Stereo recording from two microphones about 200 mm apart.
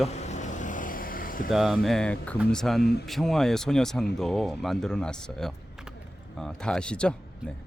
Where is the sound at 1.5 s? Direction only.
Centre (ahead or behind).